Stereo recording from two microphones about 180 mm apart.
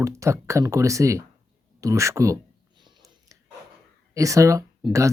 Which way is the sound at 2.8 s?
20° right (ahead or behind).